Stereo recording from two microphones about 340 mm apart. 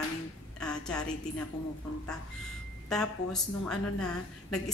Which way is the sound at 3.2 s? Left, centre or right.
Left.